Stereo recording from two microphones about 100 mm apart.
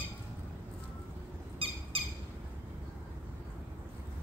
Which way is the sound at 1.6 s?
70° right (ahead or behind).